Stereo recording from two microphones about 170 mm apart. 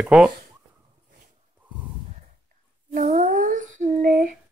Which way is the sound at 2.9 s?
50° right (ahead or behind).